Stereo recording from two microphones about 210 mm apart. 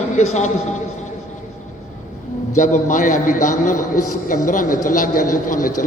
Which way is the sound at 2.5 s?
35° left (ahead or behind).